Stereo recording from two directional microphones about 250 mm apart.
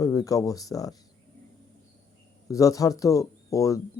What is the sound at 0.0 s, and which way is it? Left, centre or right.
Speech, centre.